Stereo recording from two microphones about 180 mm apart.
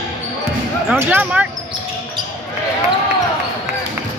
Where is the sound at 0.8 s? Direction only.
10° right (ahead or behind).